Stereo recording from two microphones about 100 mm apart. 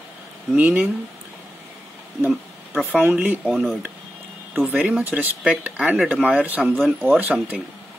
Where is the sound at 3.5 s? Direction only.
5° right (ahead or behind).